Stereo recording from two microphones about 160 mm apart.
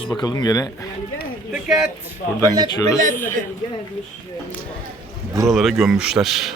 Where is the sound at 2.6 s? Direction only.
25° left (ahead or behind).